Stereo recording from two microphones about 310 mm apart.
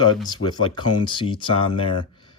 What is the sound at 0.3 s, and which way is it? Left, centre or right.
Speech, centre.